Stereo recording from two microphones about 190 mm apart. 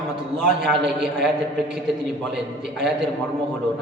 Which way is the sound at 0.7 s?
5° right (ahead or behind).